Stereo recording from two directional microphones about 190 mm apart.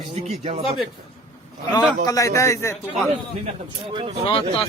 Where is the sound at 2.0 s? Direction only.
15° left (ahead or behind).